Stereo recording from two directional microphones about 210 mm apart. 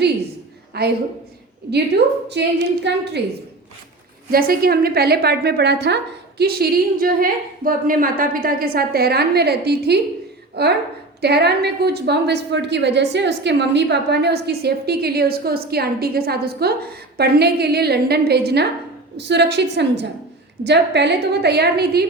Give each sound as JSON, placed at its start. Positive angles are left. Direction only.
{"t": 0.7, "sound": "a woman's voice", "side_deg": -50}
{"t": 2.3, "sound": "a woman's voice", "side_deg": -55}
{"t": 4.3, "sound": "a woman's voice", "side_deg": -45}